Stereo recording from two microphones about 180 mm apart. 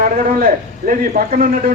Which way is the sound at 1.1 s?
50° right (ahead or behind).